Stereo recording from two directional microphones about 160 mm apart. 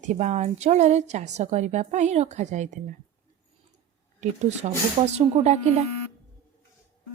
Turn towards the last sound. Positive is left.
turn(degrees=-40)  # may be behind; listen again after turning